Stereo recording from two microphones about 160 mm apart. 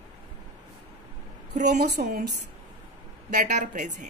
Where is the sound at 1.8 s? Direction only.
60° right (ahead or behind).